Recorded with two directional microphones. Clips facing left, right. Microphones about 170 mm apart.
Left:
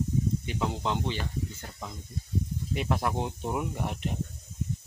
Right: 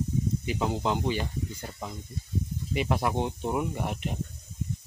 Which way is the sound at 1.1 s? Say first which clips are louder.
Right 2 dB; 10° right (ahead or behind).